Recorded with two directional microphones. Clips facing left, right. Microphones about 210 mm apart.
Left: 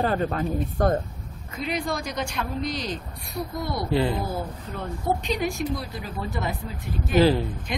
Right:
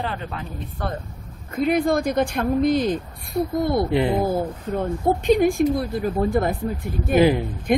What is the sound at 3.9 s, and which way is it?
Speech, 20° right (ahead or behind).